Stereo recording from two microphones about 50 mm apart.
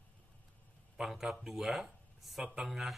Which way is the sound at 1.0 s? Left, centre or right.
Centre.